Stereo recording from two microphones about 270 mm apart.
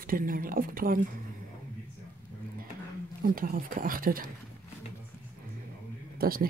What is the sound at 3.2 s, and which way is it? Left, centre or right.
Speech, right.